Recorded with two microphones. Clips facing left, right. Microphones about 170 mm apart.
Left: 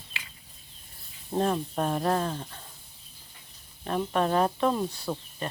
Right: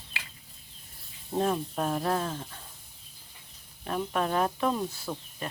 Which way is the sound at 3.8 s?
Centre (ahead or behind).